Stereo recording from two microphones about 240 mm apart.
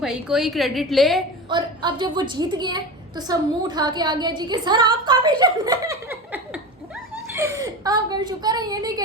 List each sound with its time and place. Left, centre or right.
0.0 s a woman's voice: centre
1.5 s a woman's voice: centre